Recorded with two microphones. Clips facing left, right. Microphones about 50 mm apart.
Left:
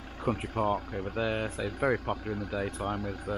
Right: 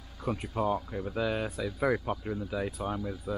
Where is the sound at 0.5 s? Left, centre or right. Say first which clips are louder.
Left 1 dB; left.